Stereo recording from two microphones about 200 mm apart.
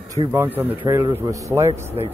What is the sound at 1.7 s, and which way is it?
Speech, 35° right (ahead or behind).